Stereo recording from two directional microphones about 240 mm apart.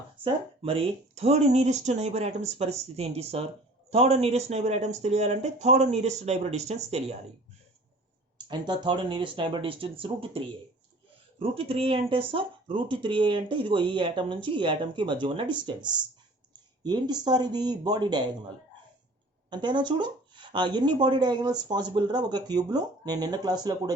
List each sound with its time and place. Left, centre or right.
0.6 s speech: right
8.4 s speech: centre
19.6 s speech: centre